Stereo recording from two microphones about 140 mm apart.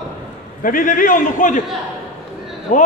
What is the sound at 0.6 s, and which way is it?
A man's voice, 75° left (ahead or behind).